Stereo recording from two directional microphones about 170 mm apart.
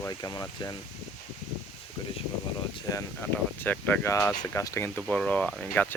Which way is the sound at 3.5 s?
10° left (ahead or behind).